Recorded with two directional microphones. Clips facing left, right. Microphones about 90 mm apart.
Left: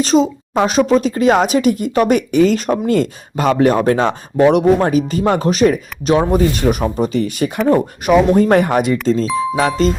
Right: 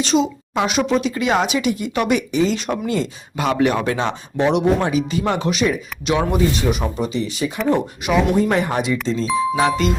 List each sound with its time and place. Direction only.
0.0 s a woman's voice: 40° left (ahead or behind)
6.6 s a woman's voice: 50° left (ahead or behind)
7.2 s a woman's voice: 55° left (ahead or behind)
9.6 s speech: 40° left (ahead or behind)